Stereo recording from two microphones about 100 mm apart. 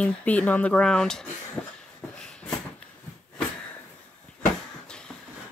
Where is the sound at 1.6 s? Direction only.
20° left (ahead or behind).